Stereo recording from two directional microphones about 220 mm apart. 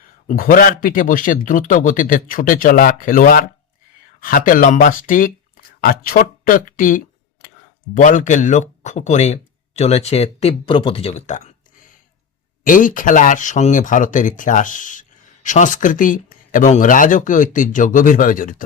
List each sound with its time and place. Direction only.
0.3 s speech: 40° left (ahead or behind)
12.6 s speech: 35° left (ahead or behind)